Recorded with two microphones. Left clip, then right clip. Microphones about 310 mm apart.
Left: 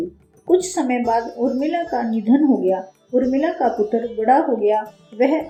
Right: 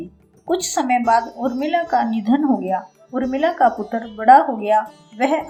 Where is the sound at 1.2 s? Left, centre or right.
Centre.